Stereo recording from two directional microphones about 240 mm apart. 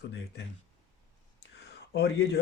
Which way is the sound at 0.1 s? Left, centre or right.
Left.